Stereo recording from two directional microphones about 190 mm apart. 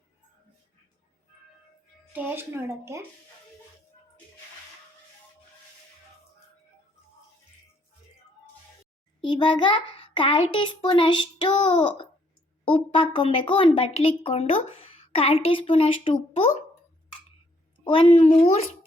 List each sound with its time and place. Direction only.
2.1 s speech: 10° right (ahead or behind)
9.2 s a woman's voice: 25° left (ahead or behind)
17.8 s a woman's voice: 30° left (ahead or behind)